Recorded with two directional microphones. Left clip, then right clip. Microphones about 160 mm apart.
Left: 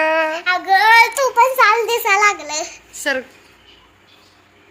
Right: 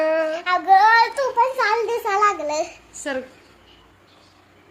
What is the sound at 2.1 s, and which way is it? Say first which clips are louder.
Speech: left 4 dB; 50° right (ahead or behind).